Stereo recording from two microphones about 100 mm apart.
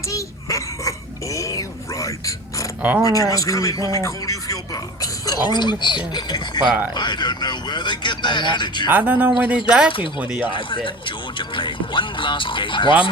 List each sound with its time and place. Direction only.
0.1 s a sound: 30° left (ahead or behind)
3.0 s speech: 35° left (ahead or behind)
8.9 s speech: 15° right (ahead or behind)
10.5 s speech: 55° left (ahead or behind)